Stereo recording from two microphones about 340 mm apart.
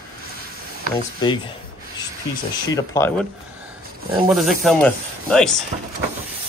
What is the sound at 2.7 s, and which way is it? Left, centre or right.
Speech, centre.